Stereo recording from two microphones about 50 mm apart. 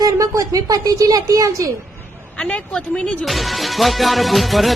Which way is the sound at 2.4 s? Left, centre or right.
Left.